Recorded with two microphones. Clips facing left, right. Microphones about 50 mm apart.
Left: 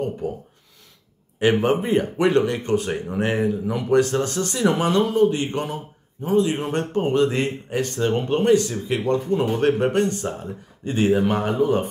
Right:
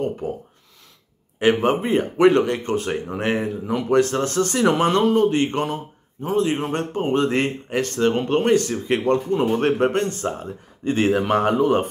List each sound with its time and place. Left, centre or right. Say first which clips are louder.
0.2 s speech: even; right
1.4 s speech: right 1 dB; right